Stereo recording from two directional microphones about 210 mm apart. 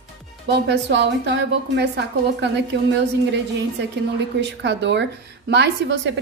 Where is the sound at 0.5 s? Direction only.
55° right (ahead or behind).